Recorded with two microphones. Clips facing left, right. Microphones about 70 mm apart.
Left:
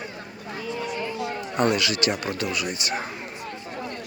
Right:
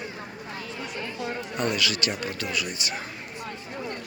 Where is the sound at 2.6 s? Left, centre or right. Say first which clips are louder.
Left 4 dB; left.